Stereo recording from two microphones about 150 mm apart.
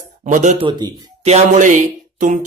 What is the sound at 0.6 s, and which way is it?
Speech, 30° right (ahead or behind).